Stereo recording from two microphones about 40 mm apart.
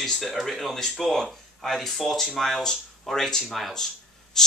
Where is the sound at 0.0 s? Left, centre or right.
Centre.